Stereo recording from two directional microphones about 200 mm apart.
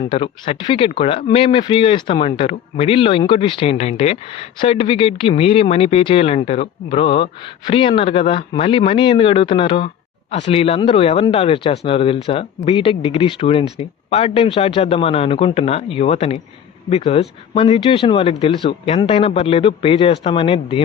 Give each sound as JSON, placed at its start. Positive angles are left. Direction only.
{"t": 0.1, "sound": "speech", "side_deg": 25}